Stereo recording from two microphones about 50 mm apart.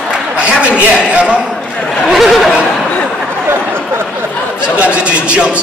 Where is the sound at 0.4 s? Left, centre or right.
Right.